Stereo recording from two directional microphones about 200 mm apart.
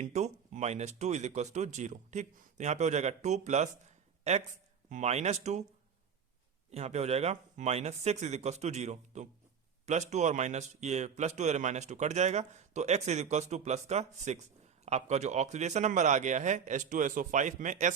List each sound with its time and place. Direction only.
0.0 s a man's voice: 35° right (ahead or behind)
6.7 s a man's voice: 30° right (ahead or behind)